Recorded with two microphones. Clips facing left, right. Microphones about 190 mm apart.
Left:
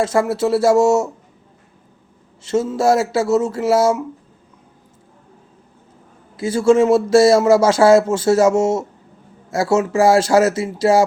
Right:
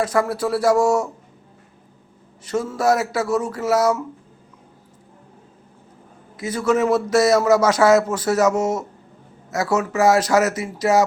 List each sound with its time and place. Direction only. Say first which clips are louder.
0.0 s a man's voice: left 3 dB; 25° left (ahead or behind)
2.4 s a man's voice: left 4 dB; 25° left (ahead or behind)
6.3 s a man's voice: left 6 dB; 30° left (ahead or behind)